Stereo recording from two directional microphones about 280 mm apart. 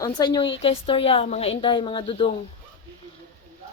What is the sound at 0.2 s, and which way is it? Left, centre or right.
A woman's voice, centre.